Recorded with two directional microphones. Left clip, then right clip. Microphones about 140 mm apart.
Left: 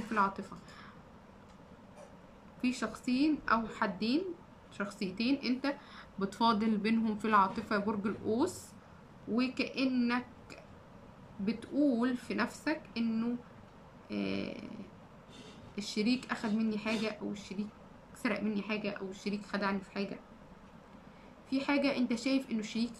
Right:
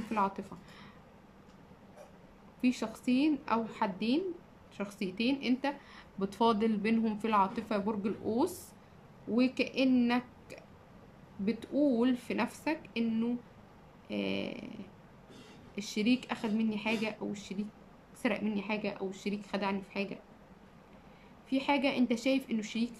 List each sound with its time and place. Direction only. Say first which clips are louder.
0.1 s a woman's voice: left 1 dB; 25° right (ahead or behind)
2.6 s speech: right 2 dB; 25° right (ahead or behind)
21.5 s speech: right 1 dB; 20° right (ahead or behind)